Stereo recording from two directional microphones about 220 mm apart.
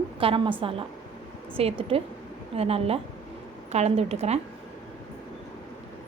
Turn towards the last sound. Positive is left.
turn(degrees=-30)  # may be behind; listen again after turning